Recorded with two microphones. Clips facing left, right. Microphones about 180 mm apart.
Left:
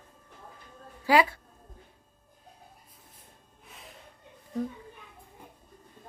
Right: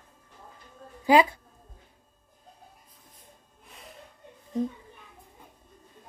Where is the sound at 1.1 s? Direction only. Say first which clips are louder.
Right 3 dB; 20° right (ahead or behind).